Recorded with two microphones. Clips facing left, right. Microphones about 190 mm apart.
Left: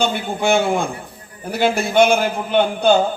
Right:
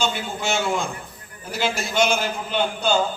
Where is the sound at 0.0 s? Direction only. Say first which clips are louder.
Left 6 dB; 55° left (ahead or behind).